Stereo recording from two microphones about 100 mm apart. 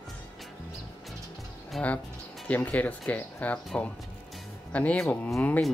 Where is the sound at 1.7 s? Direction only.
Centre (ahead or behind).